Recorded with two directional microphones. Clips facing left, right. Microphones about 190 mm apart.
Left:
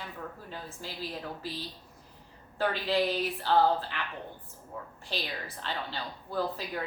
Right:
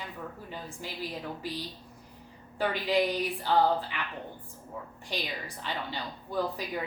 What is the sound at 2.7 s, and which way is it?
Speech, 15° right (ahead or behind).